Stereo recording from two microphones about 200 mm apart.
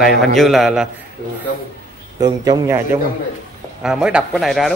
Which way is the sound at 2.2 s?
20° right (ahead or behind).